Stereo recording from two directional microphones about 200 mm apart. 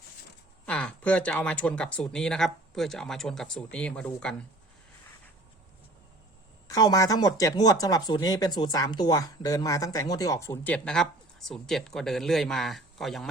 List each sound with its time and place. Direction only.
0.6 s speech: 5° left (ahead or behind)
6.7 s speech: 20° left (ahead or behind); by 13.2 s centre (ahead or behind)